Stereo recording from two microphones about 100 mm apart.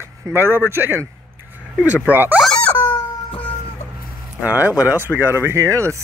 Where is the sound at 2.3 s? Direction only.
5° left (ahead or behind).